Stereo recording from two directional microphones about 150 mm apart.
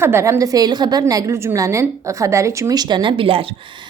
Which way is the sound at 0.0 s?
15° right (ahead or behind).